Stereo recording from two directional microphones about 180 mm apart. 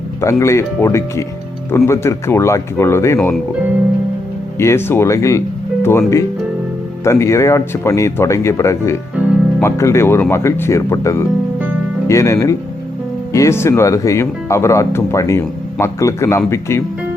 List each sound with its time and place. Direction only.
0.2 s speech: 15° left (ahead or behind)
4.5 s speech: 15° left (ahead or behind)